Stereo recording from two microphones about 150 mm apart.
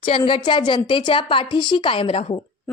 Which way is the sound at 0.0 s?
35° left (ahead or behind).